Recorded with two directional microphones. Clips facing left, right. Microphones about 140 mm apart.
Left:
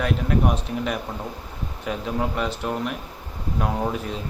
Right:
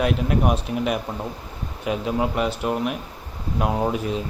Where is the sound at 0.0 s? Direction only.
15° right (ahead or behind).